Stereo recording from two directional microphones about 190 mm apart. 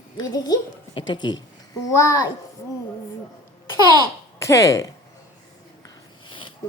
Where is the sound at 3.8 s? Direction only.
20° right (ahead or behind).